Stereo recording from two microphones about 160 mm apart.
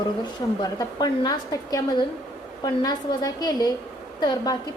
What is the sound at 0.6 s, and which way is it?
A woman's voice, 25° left (ahead or behind).